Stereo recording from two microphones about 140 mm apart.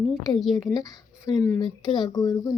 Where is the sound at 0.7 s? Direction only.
30° left (ahead or behind).